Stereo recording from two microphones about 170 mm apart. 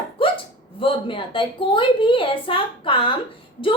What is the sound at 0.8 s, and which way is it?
A woman's voice, 30° left (ahead or behind).